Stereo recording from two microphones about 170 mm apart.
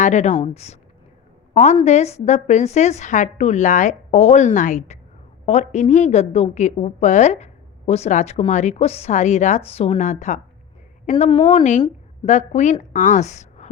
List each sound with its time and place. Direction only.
0.0 s a woman's voice: 45° left (ahead or behind)